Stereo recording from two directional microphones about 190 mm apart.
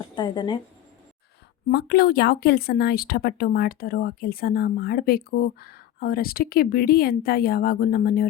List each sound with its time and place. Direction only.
0.2 s a woman's voice: 20° left (ahead or behind)
1.7 s speech: 55° left (ahead or behind)